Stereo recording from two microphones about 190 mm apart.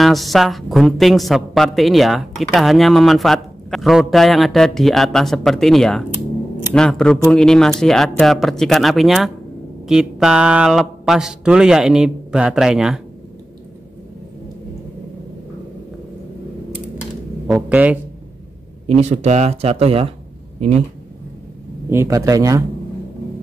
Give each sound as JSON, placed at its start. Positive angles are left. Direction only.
{"t": 0.0, "sound": "a woman's voice", "side_deg": 0}
{"t": 17.5, "sound": "speech", "side_deg": -5}
{"t": 18.9, "sound": "speech", "side_deg": -35}
{"t": 21.9, "sound": "speech", "side_deg": -15}